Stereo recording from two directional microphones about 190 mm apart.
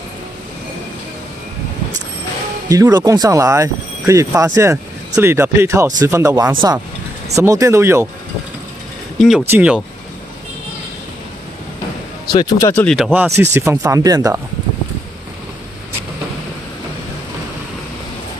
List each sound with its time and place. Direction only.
2.7 s speech: 20° right (ahead or behind)
9.4 s speech: 10° right (ahead or behind)
12.3 s speech: 20° left (ahead or behind)
12.8 s speech: centre (ahead or behind); by 14.4 s 20° right (ahead or behind)